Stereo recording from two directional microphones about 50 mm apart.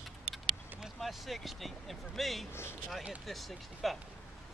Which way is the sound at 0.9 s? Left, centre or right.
Centre.